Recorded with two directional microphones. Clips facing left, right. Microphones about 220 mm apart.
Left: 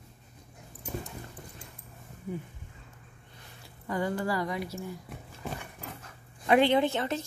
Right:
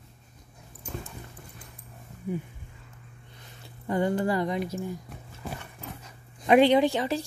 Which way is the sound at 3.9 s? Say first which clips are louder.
Right 5 dB; 25° right (ahead or behind).